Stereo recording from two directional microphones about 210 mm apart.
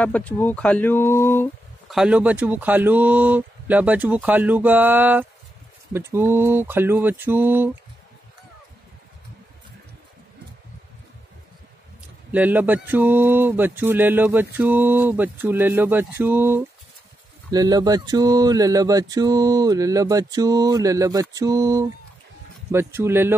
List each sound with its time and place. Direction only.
0.0 s speech: 5° left (ahead or behind)
1.9 s speech: 5° right (ahead or behind)
12.3 s speech: 10° right (ahead or behind)